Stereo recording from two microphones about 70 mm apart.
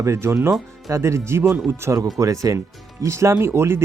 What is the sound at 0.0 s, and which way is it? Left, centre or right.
Speech, right.